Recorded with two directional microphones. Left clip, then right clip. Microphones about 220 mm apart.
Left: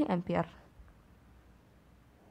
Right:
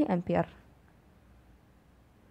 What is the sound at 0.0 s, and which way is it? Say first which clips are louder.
Speech: right 3 dB; 10° right (ahead or behind).